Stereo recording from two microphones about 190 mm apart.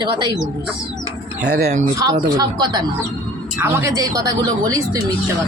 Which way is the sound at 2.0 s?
20° right (ahead or behind).